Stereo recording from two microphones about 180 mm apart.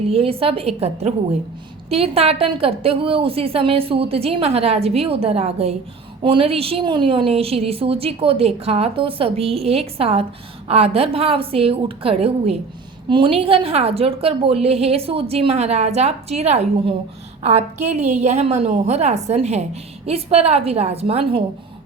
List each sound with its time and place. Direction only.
0.1 s a woman's voice: 30° right (ahead or behind)